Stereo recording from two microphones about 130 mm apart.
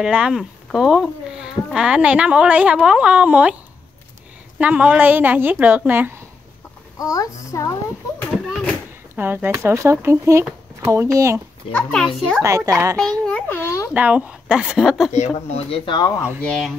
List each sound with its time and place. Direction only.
0.0 s speech: 5° right (ahead or behind)
4.6 s speech: 10° right (ahead or behind)
7.0 s a woman's voice: 25° left (ahead or behind)
9.1 s speech: 15° right (ahead or behind)
11.7 s a woman's voice: 5° left (ahead or behind)
12.4 s speech: 25° right (ahead or behind)
13.3 s a child's voice: 15° left (ahead or behind)
13.9 s a woman's voice: 10° right (ahead or behind)
15.1 s speech: 65° left (ahead or behind)
15.7 s speech: 40° left (ahead or behind)
16.4 s a woman's voice: 5° left (ahead or behind)